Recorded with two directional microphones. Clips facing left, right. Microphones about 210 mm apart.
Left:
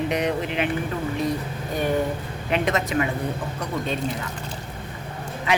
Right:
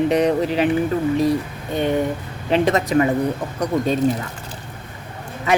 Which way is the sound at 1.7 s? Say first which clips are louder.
Right 4 dB; 25° right (ahead or behind).